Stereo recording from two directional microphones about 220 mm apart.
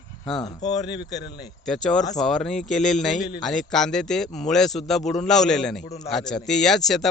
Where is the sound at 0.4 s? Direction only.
20° left (ahead or behind).